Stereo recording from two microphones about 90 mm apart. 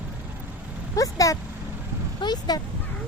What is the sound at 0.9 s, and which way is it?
Vehicle, 40° left (ahead or behind).